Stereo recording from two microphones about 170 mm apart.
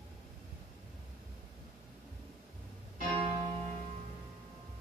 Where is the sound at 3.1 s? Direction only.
30° right (ahead or behind).